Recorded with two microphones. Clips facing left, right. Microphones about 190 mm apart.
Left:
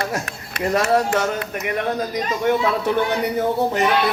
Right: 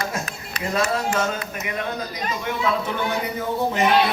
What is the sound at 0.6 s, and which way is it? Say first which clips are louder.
Speech: left 5 dB; 45° left (ahead or behind).